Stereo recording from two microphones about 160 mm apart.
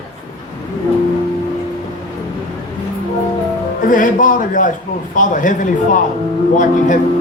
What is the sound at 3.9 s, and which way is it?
Speech, 55° left (ahead or behind).